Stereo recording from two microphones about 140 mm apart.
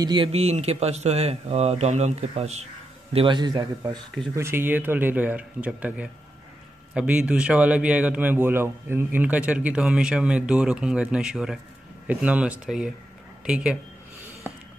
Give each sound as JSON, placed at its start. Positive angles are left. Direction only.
{"t": 0.0, "sound": "speech", "side_deg": -30}
{"t": 0.3, "sound": "speech", "side_deg": -50}
{"t": 4.4, "sound": "a man's voice", "side_deg": -15}